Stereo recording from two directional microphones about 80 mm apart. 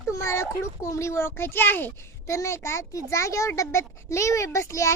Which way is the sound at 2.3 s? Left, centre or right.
Left.